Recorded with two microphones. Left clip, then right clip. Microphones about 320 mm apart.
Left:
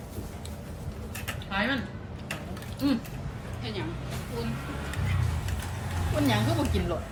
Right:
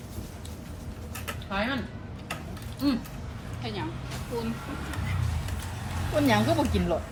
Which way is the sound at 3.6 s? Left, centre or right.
Centre.